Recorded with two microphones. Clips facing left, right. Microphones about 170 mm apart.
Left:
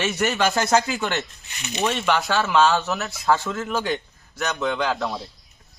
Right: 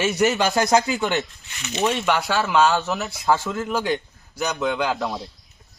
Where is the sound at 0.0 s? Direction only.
15° right (ahead or behind).